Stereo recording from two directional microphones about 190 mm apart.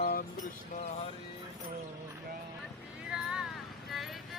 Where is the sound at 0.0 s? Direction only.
50° left (ahead or behind).